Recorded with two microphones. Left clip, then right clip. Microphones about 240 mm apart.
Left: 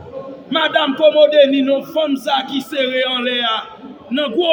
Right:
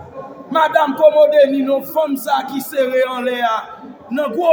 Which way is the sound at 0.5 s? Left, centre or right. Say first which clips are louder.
Right 2 dB; right.